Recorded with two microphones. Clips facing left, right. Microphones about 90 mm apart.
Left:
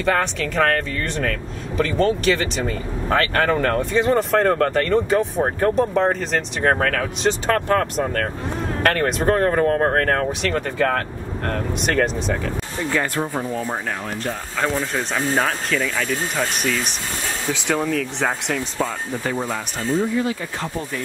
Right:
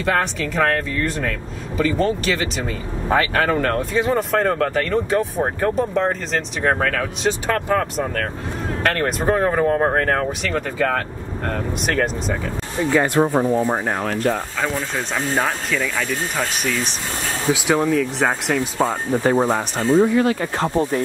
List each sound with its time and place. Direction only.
0.0 s speech: centre (ahead or behind)
12.9 s speech: 20° right (ahead or behind)
14.6 s speech: centre (ahead or behind)
18.8 s speech: 30° right (ahead or behind)
19.9 s speech: 65° right (ahead or behind)
20.6 s speech: 35° right (ahead or behind)